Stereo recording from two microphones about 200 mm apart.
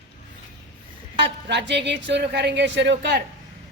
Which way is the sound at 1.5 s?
60° right (ahead or behind).